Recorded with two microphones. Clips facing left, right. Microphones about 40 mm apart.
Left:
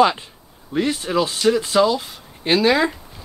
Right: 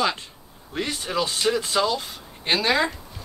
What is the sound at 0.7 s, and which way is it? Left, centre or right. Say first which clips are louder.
Speech: left 6 dB; centre.